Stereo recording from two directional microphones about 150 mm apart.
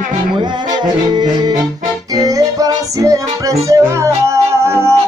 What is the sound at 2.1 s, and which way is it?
Music, 25° right (ahead or behind).